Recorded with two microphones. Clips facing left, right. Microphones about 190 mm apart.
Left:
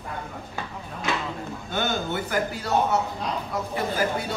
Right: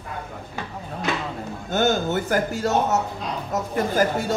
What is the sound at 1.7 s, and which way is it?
Speech, 45° right (ahead or behind).